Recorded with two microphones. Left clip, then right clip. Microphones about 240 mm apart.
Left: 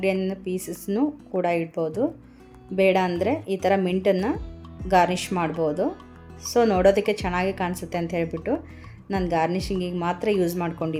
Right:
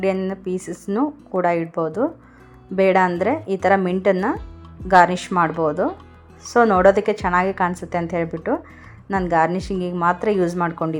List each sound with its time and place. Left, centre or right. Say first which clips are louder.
0.0 s a woman's voice: right 3 dB; centre